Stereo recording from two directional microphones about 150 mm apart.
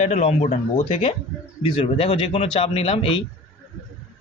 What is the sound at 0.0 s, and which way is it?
Speech, 45° left (ahead or behind).